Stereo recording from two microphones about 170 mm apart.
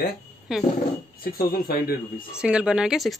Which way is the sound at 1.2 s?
60° left (ahead or behind).